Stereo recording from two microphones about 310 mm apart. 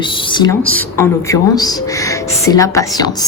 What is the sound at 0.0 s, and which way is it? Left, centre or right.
A woman's voice, centre.